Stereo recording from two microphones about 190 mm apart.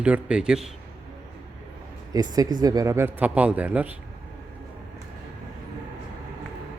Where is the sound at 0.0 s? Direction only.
5° right (ahead or behind).